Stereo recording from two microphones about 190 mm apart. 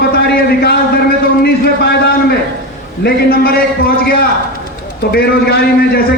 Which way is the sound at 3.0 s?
55° left (ahead or behind).